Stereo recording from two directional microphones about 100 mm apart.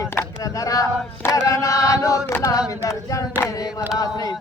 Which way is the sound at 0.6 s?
35° left (ahead or behind).